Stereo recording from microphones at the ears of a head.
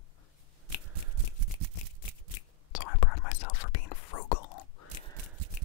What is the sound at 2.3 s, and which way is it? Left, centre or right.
Whispering, left.